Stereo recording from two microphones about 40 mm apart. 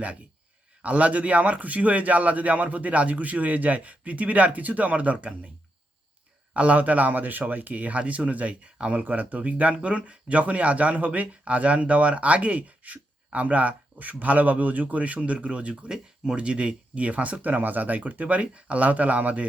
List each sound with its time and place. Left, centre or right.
0.8 s speech: right
6.5 s speech: right
9.0 s speech: right
15.9 s speech: centre
16.4 s speech: right